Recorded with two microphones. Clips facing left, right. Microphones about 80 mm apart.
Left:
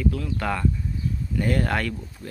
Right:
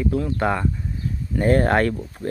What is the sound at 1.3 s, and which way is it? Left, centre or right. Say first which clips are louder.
Speech: right 7 dB; right.